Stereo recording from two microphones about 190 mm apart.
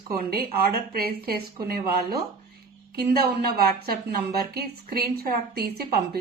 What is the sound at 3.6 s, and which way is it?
A woman's voice, 55° right (ahead or behind).